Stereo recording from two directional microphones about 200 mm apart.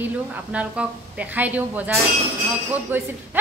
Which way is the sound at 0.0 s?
5° right (ahead or behind).